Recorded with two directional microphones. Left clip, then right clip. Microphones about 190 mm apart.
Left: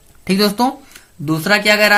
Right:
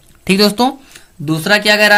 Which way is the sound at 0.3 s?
30° right (ahead or behind).